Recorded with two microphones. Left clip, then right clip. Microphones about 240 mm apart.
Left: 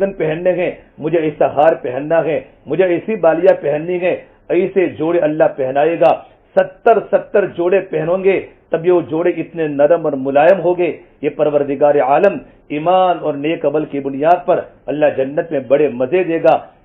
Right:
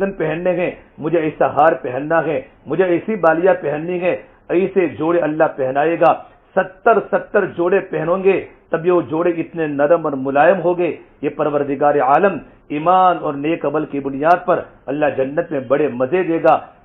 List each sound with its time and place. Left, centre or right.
0.0 s a man's voice: centre